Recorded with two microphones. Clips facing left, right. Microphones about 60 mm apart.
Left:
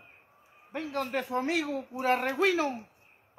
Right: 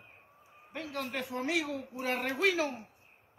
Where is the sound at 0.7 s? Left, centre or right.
Left.